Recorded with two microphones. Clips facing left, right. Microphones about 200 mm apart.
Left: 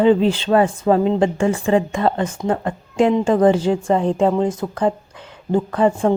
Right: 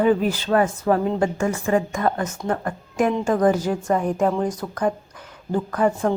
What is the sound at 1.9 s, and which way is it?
A woman's voice, 30° left (ahead or behind).